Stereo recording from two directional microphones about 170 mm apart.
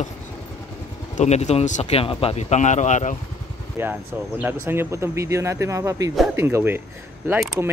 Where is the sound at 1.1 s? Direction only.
40° left (ahead or behind).